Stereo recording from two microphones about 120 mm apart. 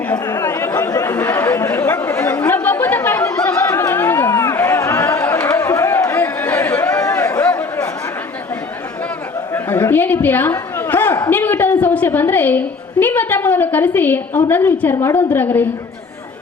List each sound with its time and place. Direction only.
0.3 s chatter: 25° left (ahead or behind)
9.5 s a sound: 20° left (ahead or behind)
11.3 s a woman's voice: 15° left (ahead or behind)